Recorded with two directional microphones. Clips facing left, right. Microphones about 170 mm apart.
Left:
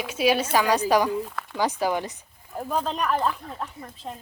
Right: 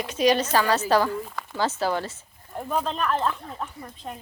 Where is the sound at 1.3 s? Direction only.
Centre (ahead or behind).